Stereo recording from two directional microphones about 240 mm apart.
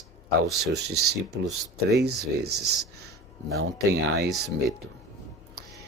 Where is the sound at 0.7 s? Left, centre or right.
Right.